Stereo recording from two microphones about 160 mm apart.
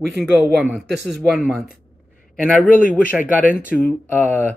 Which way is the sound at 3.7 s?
Centre (ahead or behind).